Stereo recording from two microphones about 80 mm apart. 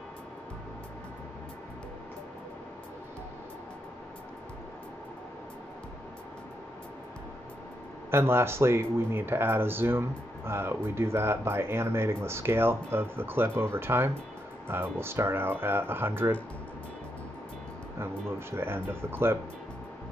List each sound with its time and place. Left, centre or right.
8.1 s speech: right
17.9 s speech: right